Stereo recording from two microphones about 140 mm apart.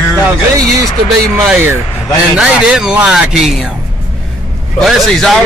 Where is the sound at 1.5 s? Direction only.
15° right (ahead or behind).